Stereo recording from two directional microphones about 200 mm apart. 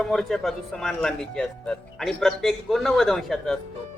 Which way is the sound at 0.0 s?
Centre (ahead or behind).